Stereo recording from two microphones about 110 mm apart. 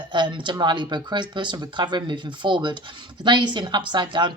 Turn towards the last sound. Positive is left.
turn(degrees=-45)  # may be behind; listen again after turning